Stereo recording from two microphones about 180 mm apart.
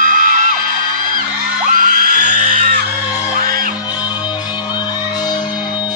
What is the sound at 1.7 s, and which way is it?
Music, 50° right (ahead or behind).